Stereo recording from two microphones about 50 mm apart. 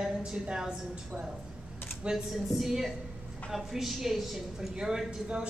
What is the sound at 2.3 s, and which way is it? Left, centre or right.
Speech, centre.